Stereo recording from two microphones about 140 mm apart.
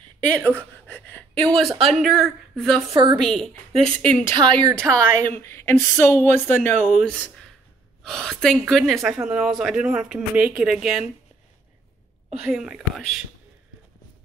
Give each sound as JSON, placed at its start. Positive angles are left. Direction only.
{"t": 0.5, "sound": "speech", "side_deg": 10}
{"t": 2.9, "sound": "speech", "side_deg": -30}
{"t": 3.2, "sound": "speech", "side_deg": 5}
{"t": 4.3, "sound": "speech", "side_deg": -30}
{"t": 4.7, "sound": "speech", "side_deg": 5}
{"t": 5.4, "sound": "speech", "side_deg": 20}
{"t": 12.4, "sound": "speech", "side_deg": -5}